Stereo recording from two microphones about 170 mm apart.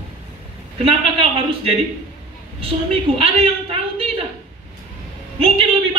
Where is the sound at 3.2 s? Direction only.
35° right (ahead or behind).